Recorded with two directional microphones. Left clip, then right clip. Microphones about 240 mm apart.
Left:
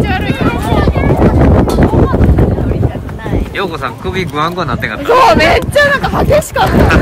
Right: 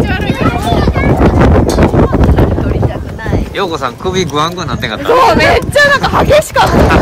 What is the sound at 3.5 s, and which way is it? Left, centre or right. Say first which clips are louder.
A man's voice: right 3 dB; centre.